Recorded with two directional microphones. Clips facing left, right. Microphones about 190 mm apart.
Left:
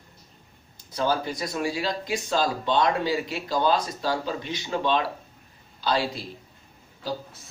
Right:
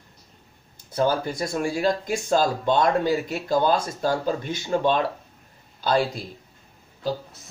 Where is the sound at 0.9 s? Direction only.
50° right (ahead or behind).